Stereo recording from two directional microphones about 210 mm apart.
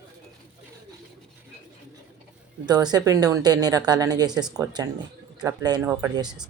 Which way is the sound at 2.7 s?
20° right (ahead or behind).